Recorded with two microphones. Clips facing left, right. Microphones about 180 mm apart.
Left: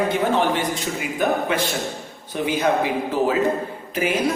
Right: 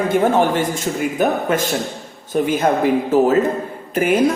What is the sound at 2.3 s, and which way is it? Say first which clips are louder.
A man's voice: right 4 dB; 50° right (ahead or behind).